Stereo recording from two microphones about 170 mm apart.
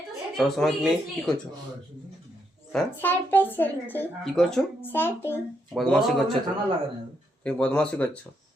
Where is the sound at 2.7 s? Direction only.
10° left (ahead or behind).